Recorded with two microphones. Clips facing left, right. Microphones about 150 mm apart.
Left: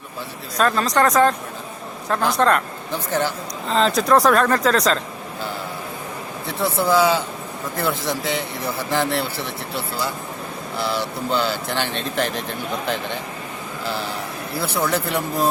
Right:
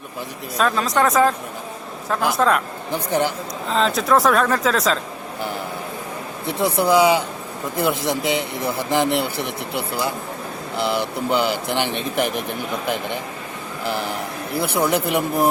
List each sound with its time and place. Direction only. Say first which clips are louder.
0.5 s speech: left 1 dB; 5° right (ahead or behind)
2.9 s speech: right 2 dB; 15° right (ahead or behind)
3.7 s speech: left 1 dB; centre (ahead or behind)
6.4 s speech: right 2 dB; 20° right (ahead or behind)